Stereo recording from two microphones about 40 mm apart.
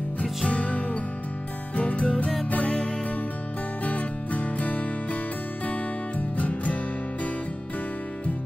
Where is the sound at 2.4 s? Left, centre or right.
Left.